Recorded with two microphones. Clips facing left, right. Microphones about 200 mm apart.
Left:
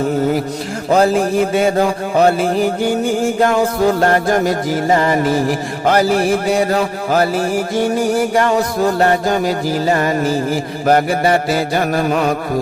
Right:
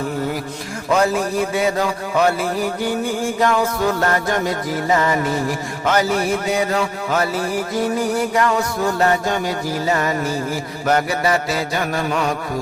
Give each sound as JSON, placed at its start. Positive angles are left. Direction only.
{"t": 0.9, "sound": "music", "side_deg": 35}
{"t": 1.8, "sound": "mantra", "side_deg": 30}
{"t": 3.4, "sound": "music", "side_deg": 30}